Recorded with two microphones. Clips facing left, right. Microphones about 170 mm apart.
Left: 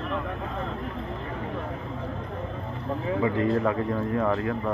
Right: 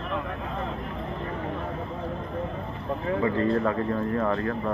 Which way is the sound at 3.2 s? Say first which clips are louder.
Even; 15° left (ahead or behind).